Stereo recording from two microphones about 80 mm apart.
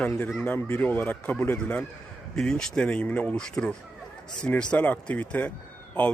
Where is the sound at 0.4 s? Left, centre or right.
Left.